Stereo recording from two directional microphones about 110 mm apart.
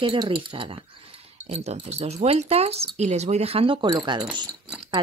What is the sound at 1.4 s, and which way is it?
Speech, 75° right (ahead or behind).